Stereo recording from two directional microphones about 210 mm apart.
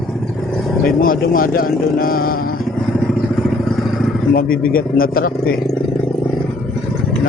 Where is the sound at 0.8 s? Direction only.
45° left (ahead or behind).